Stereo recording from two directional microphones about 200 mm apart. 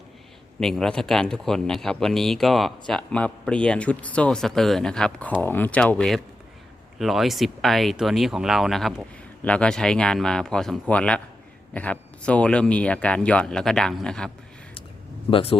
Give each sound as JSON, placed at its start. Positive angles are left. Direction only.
{"t": 0.6, "sound": "speech", "side_deg": 5}
{"t": 15.3, "sound": "speech", "side_deg": 30}